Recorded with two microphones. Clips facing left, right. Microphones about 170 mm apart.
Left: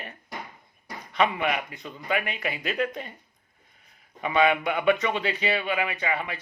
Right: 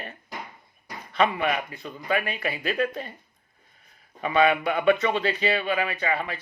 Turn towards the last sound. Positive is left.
turn(degrees=15)  # may be behind; listen again after turning